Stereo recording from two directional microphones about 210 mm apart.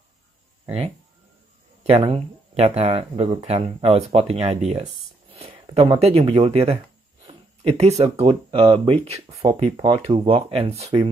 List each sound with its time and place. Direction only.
0.7 s speech: 30° right (ahead or behind)